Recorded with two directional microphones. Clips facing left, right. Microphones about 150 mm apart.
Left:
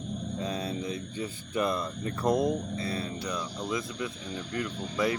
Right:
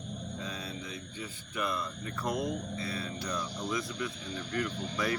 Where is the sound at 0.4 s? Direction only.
30° left (ahead or behind).